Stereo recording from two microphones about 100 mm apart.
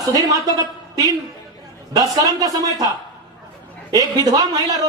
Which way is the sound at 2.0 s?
35° right (ahead or behind).